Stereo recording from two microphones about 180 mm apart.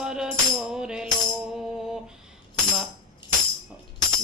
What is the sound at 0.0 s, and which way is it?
Music, 5° right (ahead or behind).